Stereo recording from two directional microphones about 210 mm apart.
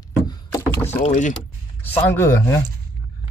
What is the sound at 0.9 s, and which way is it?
Speech, 35° left (ahead or behind).